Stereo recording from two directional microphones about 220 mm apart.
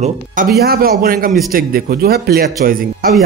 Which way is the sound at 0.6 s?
45° right (ahead or behind).